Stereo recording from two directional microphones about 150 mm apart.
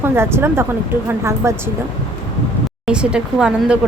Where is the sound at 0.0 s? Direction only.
15° right (ahead or behind).